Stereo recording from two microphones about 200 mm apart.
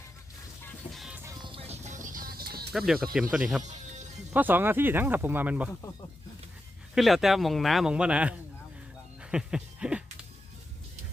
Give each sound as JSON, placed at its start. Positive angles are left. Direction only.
{"t": 0.9, "sound": "music", "side_deg": -5}
{"t": 1.5, "sound": "music", "side_deg": -30}
{"t": 2.7, "sound": "speech", "side_deg": 0}
{"t": 3.6, "sound": "music", "side_deg": -35}
{"t": 4.4, "sound": "speech", "side_deg": -10}
{"t": 6.9, "sound": "speech", "side_deg": 0}
{"t": 9.2, "sound": "music", "side_deg": -5}